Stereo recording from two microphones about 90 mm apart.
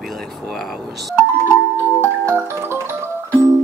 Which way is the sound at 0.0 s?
Centre (ahead or behind).